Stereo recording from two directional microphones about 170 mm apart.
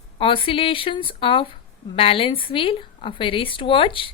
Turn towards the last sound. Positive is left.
turn(degrees=30)  # may be behind; listen again after turning